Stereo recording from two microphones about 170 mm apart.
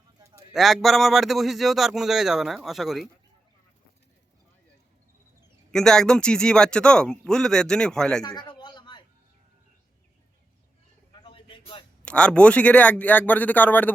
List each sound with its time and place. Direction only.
0.2 s a sound: 20° right (ahead or behind)
0.5 s speech: centre (ahead or behind)
5.7 s speech: 5° left (ahead or behind)
8.2 s a sound: 25° left (ahead or behind)
11.1 s bird: 30° left (ahead or behind)
12.0 s speech: 5° left (ahead or behind)